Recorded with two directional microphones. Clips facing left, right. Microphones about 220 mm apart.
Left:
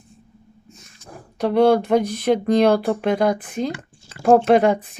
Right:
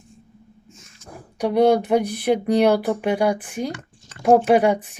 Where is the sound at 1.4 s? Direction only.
15° right (ahead or behind).